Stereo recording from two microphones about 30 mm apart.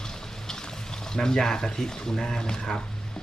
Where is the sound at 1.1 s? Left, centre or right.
Left.